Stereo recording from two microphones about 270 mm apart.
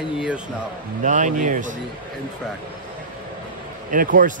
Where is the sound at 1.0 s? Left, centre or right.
Right.